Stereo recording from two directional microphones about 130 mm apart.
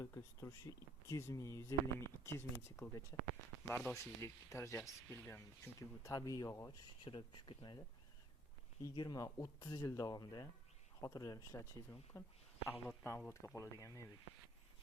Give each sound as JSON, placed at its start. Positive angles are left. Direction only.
{"t": 0.0, "sound": "speech", "side_deg": 20}
{"t": 7.0, "sound": "speech", "side_deg": 40}